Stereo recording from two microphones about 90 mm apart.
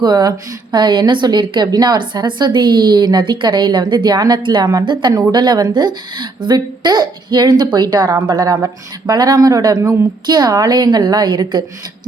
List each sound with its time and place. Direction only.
0.0 s a woman's voice: 50° right (ahead or behind)